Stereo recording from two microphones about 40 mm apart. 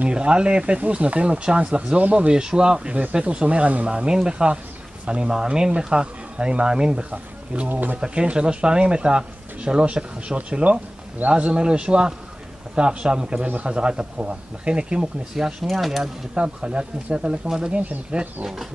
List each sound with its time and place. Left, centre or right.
0.1 s speech: right
1.4 s speech: right
3.8 s speech: right
7.1 s speech: right
8.0 s speech: right
15.3 s speech: centre
15.7 s mechanisms: centre
16.3 s speech: right
18.4 s speech: centre